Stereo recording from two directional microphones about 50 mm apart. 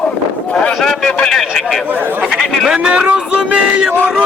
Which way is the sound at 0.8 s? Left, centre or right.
Centre.